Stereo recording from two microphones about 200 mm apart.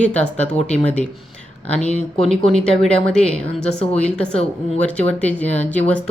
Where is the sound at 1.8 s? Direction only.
30° left (ahead or behind).